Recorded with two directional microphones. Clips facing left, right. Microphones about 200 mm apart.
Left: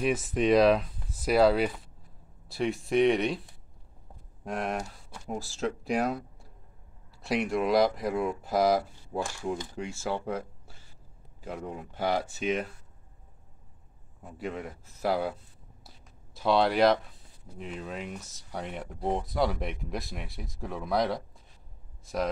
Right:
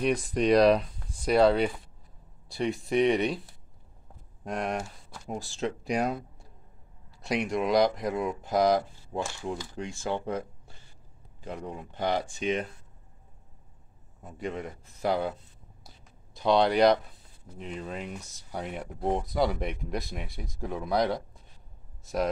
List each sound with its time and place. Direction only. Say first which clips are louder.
0.0 s speech: right 1 dB; 5° left (ahead or behind)
4.5 s speech: right 1 dB; centre (ahead or behind)
14.2 s speech: right 1 dB; 5° left (ahead or behind)
16.3 s speech: right 1 dB; 5° left (ahead or behind)